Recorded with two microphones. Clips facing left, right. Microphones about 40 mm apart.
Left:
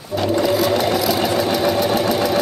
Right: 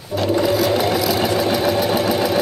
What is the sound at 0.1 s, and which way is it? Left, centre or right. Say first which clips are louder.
Sewing machine: even; centre.